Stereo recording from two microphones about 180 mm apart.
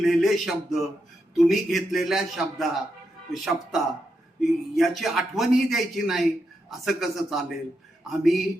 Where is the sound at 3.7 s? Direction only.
Centre (ahead or behind).